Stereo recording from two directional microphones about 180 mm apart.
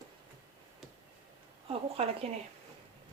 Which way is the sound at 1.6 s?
30° right (ahead or behind).